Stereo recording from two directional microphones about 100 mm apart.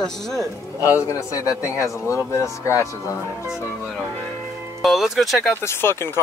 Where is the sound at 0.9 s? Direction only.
30° left (ahead or behind).